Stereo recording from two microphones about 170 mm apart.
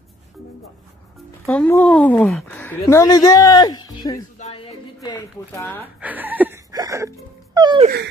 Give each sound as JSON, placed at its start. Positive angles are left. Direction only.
{"t": 1.4, "sound": "a man's voice", "side_deg": 10}
{"t": 5.9, "sound": "speech", "side_deg": -10}
{"t": 6.7, "sound": "music", "side_deg": -20}